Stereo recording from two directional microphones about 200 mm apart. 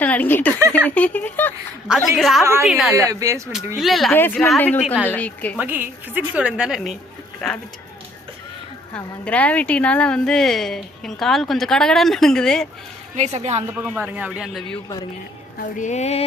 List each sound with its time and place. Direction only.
0.0 s speech: 10° left (ahead or behind)
0.7 s a sound: 5° left (ahead or behind)
1.9 s a woman's voice: centre (ahead or behind)
2.4 s a woman's voice: 15° right (ahead or behind)
2.6 s a woman's voice: centre (ahead or behind)
2.9 s a woman's voice: 15° right (ahead or behind)
3.8 s a woman's voice: centre (ahead or behind)
4.1 s a woman's voice: 10° left (ahead or behind)
5.5 s a woman's voice: 10° right (ahead or behind)
9.2 s a woman's voice: 5° left (ahead or behind)
13.1 s a woman's voice: 35° right (ahead or behind)
13.7 s a woman's voice: 5° right (ahead or behind)
15.5 s music: 40° left (ahead or behind)